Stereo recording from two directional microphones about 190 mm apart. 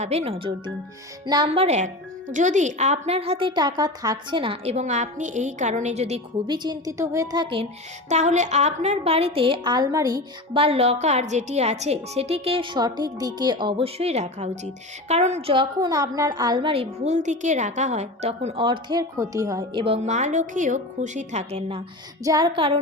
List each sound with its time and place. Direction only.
0.0 s a woman's voice: 35° right (ahead or behind)
6.5 s a woman's voice: 20° right (ahead or behind)
8.1 s a woman's voice: 40° right (ahead or behind)
22.2 s a woman's voice: 20° right (ahead or behind)